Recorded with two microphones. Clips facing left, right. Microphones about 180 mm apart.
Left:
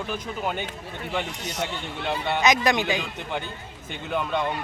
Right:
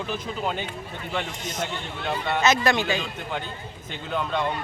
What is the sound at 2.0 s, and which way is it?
Speech, 5° left (ahead or behind).